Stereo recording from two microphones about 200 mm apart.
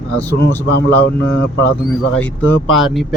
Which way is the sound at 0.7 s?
55° left (ahead or behind).